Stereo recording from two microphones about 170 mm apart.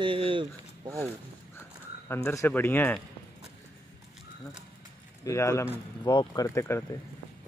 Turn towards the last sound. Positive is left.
turn(degrees=15)  # may be behind; listen again after turning